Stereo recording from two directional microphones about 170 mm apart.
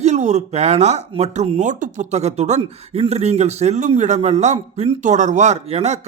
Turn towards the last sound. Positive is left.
turn(degrees=-40)  # may be behind; listen again after turning